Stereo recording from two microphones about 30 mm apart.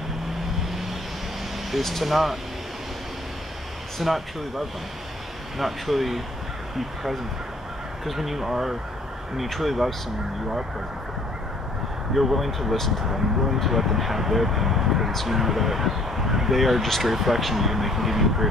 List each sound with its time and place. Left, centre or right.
1.8 s speech: centre
4.0 s speech: centre
12.1 s speech: centre